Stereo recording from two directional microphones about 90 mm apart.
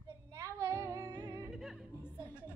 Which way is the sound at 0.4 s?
35° right (ahead or behind).